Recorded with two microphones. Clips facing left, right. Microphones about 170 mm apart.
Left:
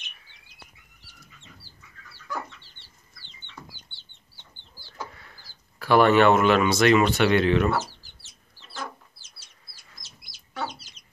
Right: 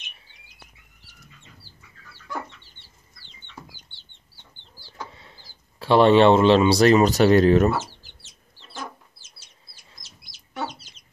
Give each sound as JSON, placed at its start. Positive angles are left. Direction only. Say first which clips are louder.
{"t": 5.1, "sound": "speech", "louder": "right 2 dB", "side_deg": -25}
{"t": 7.7, "sound": "speech", "louder": "even", "side_deg": -25}